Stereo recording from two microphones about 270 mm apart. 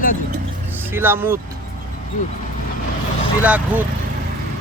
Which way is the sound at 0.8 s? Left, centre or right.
Centre.